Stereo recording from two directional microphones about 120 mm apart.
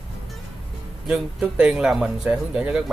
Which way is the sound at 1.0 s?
5° right (ahead or behind).